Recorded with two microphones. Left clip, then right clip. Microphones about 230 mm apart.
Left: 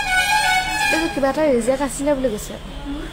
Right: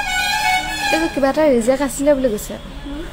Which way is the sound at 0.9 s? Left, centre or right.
Centre.